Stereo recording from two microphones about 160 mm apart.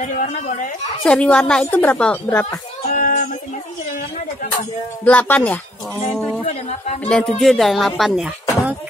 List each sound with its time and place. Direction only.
0.0 s speech: 50° left (ahead or behind)
1.0 s speech: 5° left (ahead or behind)
2.9 s child singing: 55° left (ahead or behind)
5.0 s speech: 10° left (ahead or behind)
6.1 s speech: centre (ahead or behind)